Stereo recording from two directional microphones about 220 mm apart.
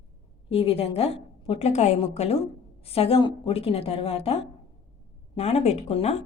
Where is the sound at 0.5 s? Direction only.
25° left (ahead or behind).